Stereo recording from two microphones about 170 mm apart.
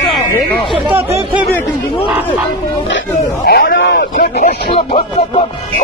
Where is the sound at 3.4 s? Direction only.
60° left (ahead or behind).